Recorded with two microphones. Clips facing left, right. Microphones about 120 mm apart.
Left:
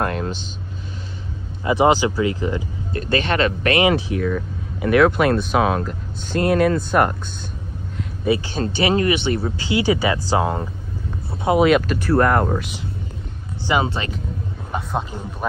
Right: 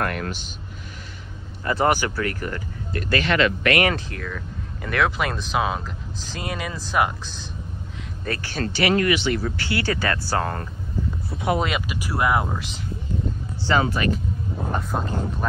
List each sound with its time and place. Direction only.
0.0 s vehicle: 25° left (ahead or behind)
1.6 s speech: 15° left (ahead or behind); by 3.7 s 35° left (ahead or behind)
3.9 s speech: 5° left (ahead or behind)
8.0 s speech: 10° left (ahead or behind)
11.6 s speech: centre (ahead or behind)
13.8 s speech: 25° left (ahead or behind)
14.7 s vehicle: centre (ahead or behind)